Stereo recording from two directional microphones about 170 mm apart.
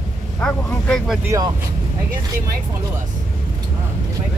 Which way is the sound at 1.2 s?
20° right (ahead or behind).